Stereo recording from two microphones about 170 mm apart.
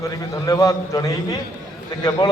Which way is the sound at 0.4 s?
20° left (ahead or behind).